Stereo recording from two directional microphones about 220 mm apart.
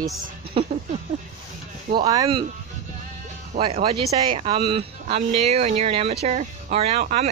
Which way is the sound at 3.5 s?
25° right (ahead or behind).